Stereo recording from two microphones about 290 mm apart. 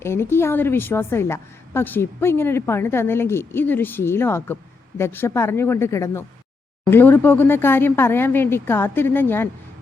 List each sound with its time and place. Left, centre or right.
0.0 s a woman's voice: centre